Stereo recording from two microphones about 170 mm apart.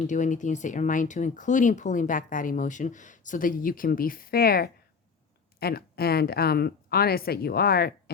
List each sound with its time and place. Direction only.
0.1 s speech: 45° left (ahead or behind); by 8.1 s 65° left (ahead or behind)